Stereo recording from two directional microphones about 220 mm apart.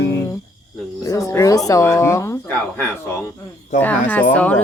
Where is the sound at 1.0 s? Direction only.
15° left (ahead or behind).